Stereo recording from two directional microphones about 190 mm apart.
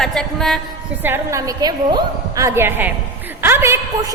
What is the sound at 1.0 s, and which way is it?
A woman's voice, 15° right (ahead or behind).